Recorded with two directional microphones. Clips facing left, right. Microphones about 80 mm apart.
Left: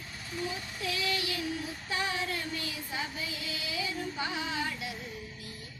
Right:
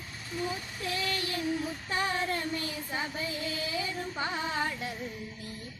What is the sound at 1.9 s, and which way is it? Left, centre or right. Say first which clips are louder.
Female singing: right 2 dB; right.